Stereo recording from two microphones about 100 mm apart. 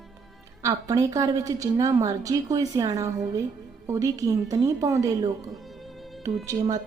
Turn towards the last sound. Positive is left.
turn(degrees=-35)  # may be behind; listen again after turning